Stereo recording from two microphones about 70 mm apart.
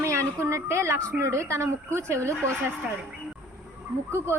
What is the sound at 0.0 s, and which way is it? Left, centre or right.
A woman's voice, right.